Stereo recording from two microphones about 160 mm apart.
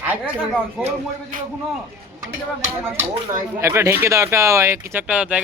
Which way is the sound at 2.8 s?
15° right (ahead or behind).